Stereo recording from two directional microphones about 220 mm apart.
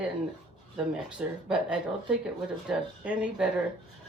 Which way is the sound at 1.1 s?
5° right (ahead or behind).